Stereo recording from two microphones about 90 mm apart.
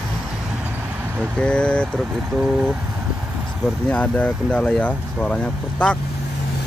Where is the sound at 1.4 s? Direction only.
10° left (ahead or behind).